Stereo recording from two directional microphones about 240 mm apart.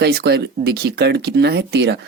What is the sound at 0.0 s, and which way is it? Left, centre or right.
Speech, right.